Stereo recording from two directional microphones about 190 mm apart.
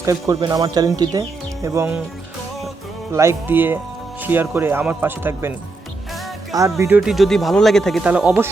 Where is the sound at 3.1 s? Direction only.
15° right (ahead or behind).